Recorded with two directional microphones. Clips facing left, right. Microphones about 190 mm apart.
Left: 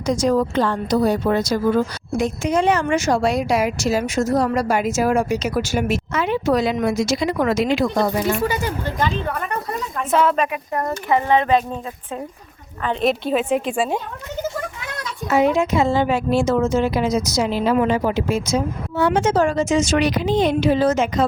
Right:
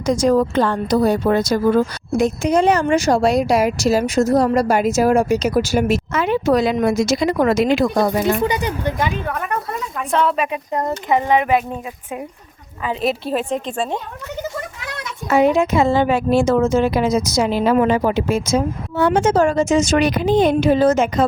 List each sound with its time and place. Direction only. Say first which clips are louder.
0.0 s a woman's voice: right 3 dB; 50° right (ahead or behind)
2.1 s a woman's voice: right 3 dB; 40° right (ahead or behind)
8.4 s speech: right 2 dB; 20° right (ahead or behind)
10.1 s a woman's voice: left 1 dB; centre (ahead or behind)
10.5 s speech: right 2 dB; 20° right (ahead or behind)
12.8 s a woman's voice: left 1 dB; 5° right (ahead or behind)
15.3 s a woman's voice: right 2 dB; 55° right (ahead or behind)